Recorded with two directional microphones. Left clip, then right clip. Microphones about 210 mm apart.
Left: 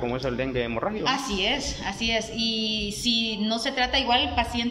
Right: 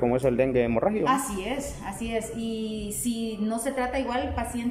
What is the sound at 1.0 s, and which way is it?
Speech, 5° right (ahead or behind).